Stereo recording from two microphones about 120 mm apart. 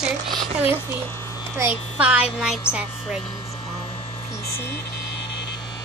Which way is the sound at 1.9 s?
10° right (ahead or behind).